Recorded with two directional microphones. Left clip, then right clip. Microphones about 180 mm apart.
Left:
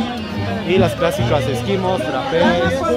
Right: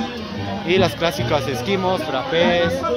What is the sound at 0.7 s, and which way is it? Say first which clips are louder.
Speech: left 2 dB; 15° right (ahead or behind).